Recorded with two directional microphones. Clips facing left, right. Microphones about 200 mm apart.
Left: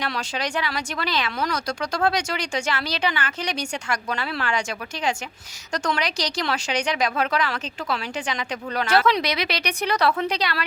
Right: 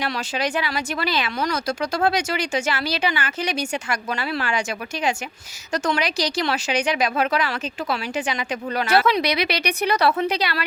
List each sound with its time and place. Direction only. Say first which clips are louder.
0.0 s speech: right 3 dB; 5° right (ahead or behind)
5.7 s speech: right 3 dB; 5° right (ahead or behind)